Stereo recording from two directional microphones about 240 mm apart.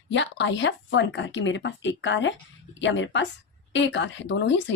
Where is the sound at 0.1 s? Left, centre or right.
Left.